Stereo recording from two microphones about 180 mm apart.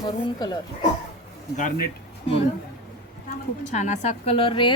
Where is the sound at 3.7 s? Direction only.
40° left (ahead or behind).